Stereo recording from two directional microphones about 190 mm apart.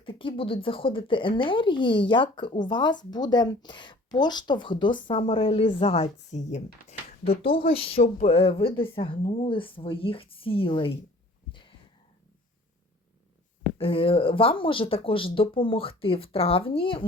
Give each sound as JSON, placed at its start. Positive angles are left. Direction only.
{"t": 0.0, "sound": "a woman's voice", "side_deg": 25}
{"t": 13.7, "sound": "a woman's voice", "side_deg": 30}